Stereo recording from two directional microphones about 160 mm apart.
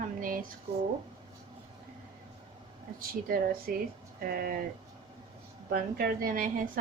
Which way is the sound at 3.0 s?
65° right (ahead or behind).